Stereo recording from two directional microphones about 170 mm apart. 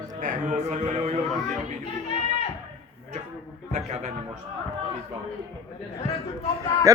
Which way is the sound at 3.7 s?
40° right (ahead or behind).